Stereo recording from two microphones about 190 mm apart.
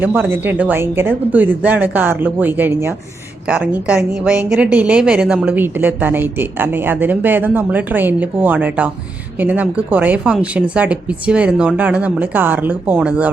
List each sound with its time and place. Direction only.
0.0 s a woman's voice: 10° right (ahead or behind)